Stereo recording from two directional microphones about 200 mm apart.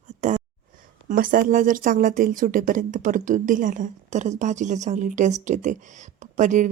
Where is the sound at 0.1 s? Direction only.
35° right (ahead or behind).